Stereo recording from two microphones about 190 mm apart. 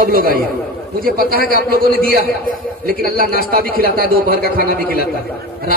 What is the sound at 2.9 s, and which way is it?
Speech, 50° right (ahead or behind).